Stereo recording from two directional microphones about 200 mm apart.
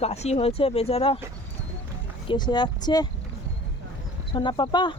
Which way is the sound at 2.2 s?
20° left (ahead or behind).